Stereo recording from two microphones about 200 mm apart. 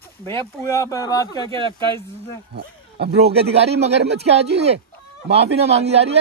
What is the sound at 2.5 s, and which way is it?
Speech, 55° right (ahead or behind).